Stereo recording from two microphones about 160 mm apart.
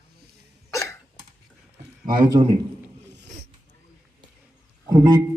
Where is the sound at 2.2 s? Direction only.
30° right (ahead or behind).